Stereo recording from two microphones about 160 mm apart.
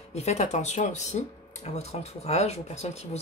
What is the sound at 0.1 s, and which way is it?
Speech, 45° left (ahead or behind).